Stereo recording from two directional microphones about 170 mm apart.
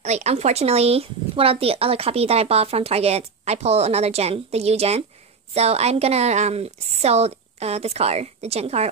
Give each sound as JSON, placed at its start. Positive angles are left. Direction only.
{"t": 0.0, "sound": "speech", "side_deg": -40}